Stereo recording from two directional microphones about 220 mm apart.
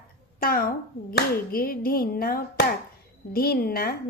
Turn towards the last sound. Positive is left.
turn(degrees=45)  # may be behind; listen again after turning